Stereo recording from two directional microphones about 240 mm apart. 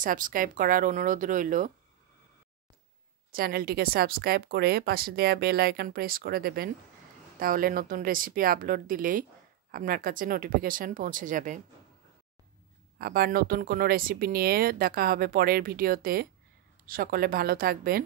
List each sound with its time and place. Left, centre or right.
0.0 s speech: right
3.3 s speech: right
13.0 s speech: right